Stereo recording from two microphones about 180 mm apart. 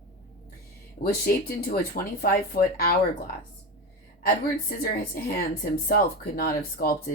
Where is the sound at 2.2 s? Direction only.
55° left (ahead or behind).